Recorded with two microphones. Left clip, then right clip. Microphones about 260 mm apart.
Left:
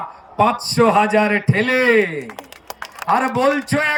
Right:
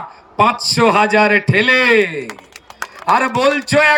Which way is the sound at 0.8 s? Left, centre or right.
Centre.